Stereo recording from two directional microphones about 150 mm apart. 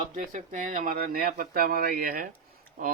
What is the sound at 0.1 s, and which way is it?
Speech, 60° right (ahead or behind).